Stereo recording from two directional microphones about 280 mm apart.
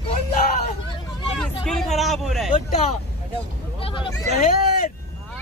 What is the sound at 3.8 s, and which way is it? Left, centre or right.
Speech, centre.